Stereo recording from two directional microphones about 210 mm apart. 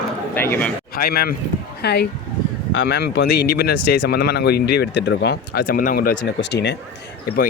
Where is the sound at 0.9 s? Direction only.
45° left (ahead or behind).